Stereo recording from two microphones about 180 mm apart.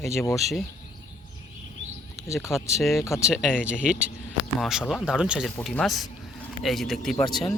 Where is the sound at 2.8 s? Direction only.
Centre (ahead or behind).